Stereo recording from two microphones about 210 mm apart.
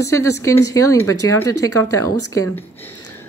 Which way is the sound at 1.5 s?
90° left.